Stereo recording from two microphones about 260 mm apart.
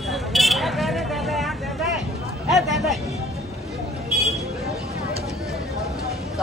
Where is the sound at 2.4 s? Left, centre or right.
Centre.